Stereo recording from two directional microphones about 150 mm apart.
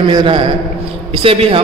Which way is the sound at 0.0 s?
35° right (ahead or behind).